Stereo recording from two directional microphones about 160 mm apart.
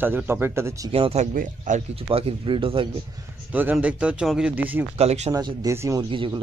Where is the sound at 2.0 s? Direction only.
35° right (ahead or behind).